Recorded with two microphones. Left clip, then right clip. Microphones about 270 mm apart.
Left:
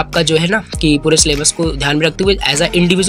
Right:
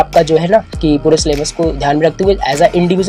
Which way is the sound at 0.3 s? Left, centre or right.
Left.